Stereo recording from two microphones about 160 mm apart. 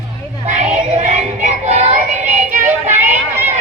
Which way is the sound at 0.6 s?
45° right (ahead or behind).